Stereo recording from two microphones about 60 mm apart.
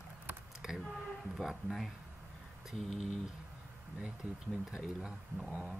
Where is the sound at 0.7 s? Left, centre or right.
Centre.